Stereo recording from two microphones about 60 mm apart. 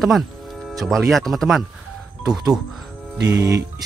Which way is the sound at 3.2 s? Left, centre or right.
Right.